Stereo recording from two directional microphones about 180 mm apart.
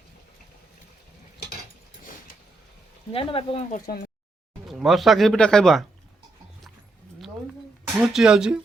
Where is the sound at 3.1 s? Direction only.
30° left (ahead or behind).